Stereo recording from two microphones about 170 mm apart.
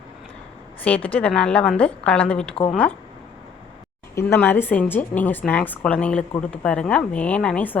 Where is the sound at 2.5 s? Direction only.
35° left (ahead or behind).